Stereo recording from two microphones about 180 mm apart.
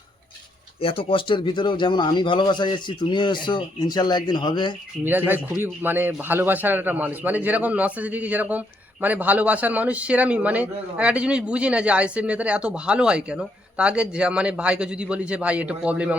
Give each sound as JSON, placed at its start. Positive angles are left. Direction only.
{"t": 0.8, "sound": "speech", "side_deg": 30}
{"t": 5.0, "sound": "a man's voice", "side_deg": -10}